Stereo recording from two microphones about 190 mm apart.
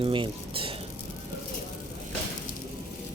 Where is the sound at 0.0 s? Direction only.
25° right (ahead or behind).